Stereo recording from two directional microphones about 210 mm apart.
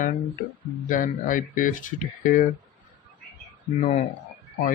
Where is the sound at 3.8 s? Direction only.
35° left (ahead or behind).